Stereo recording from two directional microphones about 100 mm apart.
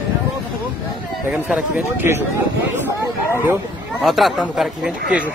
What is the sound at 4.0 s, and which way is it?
Speech, centre (ahead or behind).